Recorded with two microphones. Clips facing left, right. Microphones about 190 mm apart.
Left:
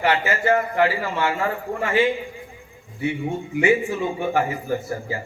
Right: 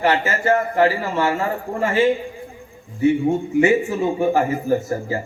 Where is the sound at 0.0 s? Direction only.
40° right (ahead or behind).